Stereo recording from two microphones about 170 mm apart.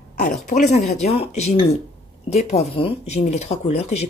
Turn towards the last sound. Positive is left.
turn(degrees=40)  # may be behind; listen again after turning